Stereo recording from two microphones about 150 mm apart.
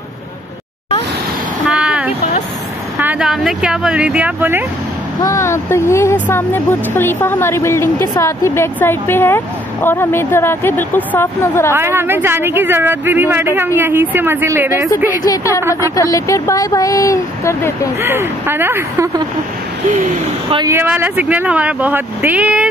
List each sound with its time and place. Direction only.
1.7 s vehicle: 5° right (ahead or behind)
3.0 s speech: 10° right (ahead or behind)
5.2 s speech: 20° left (ahead or behind)
11.7 s speech: 15° right (ahead or behind)
15.2 s speech: 20° left (ahead or behind)
18.0 s speech: 15° right (ahead or behind)
20.4 s speech: 30° right (ahead or behind)
20.7 s speech: 15° right (ahead or behind)